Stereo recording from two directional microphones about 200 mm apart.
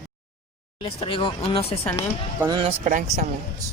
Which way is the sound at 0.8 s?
25° left (ahead or behind).